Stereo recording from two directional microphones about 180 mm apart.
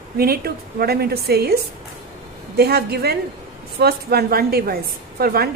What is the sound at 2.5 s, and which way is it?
A woman's voice, 60° right (ahead or behind).